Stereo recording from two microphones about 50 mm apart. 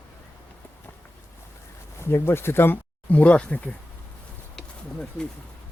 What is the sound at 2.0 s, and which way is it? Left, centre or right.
Speech, left.